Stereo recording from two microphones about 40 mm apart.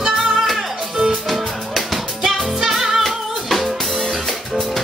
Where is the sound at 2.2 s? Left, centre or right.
Centre.